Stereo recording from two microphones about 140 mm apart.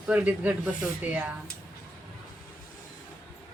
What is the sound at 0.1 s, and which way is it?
Speech, 10° right (ahead or behind).